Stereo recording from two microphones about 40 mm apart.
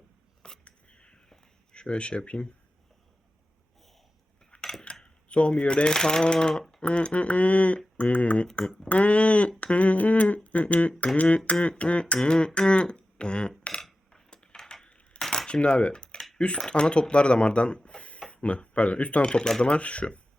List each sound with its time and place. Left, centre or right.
0.6 s a sound: left
1.7 s speech: left
4.5 s cutlery: left
5.0 s speech: left
11.8 s beatboxing: left
12.5 s speech: left
14.1 s a sound: left
14.6 s coin: centre
15.3 s coin: left
16.6 s speech: centre
19.6 s speech: left